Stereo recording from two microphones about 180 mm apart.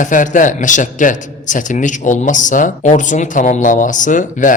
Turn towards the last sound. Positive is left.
turn(degrees=45)  # may be behind; listen again after turning